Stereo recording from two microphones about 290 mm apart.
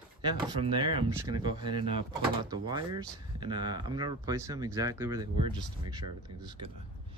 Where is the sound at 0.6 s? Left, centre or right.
Centre.